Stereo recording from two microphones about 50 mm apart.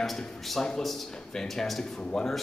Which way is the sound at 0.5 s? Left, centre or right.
Centre.